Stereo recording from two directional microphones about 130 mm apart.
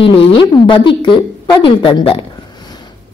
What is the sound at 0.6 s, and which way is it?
A woman's voice, 40° left (ahead or behind).